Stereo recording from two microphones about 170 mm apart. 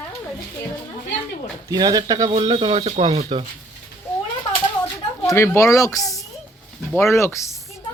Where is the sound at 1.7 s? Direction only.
20° right (ahead or behind).